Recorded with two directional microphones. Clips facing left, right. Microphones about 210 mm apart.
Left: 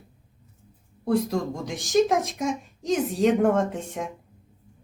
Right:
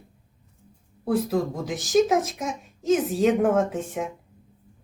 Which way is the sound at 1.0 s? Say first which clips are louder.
Even; 5° right (ahead or behind).